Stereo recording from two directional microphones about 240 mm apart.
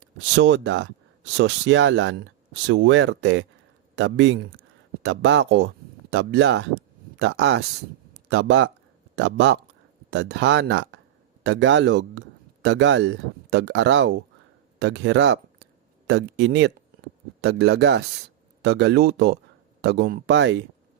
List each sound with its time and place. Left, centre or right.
0.2 s speech: right